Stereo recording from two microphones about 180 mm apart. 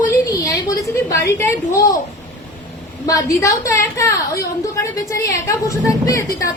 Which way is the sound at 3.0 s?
20° left (ahead or behind).